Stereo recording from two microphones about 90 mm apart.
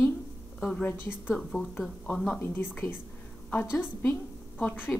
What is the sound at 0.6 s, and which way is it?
A woman's voice, 10° left (ahead or behind).